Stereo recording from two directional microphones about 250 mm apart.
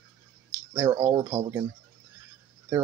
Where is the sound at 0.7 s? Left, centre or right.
Centre.